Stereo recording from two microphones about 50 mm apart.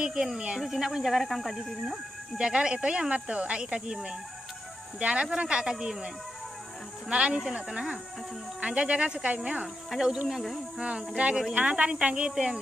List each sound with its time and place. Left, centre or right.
0.0 s speech: centre
2.3 s speech: centre
7.1 s speech: right
9.9 s speech: centre
10.8 s speech: right